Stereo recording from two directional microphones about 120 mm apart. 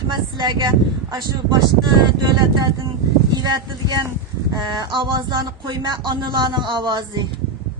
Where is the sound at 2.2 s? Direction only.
35° right (ahead or behind).